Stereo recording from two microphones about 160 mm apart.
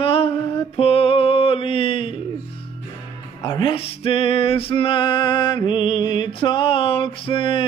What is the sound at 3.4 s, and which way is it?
Music, 30° left (ahead or behind).